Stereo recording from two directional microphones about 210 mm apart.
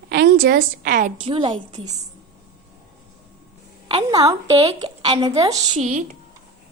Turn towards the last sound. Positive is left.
turn(degrees=-30)  # may be behind; listen again after turning